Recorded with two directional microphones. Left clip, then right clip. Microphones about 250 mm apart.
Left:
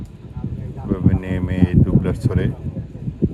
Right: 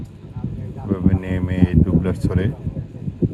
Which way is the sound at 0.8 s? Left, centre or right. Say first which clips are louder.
Even; left.